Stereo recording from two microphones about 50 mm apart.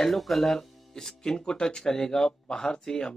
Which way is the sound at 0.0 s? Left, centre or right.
Centre.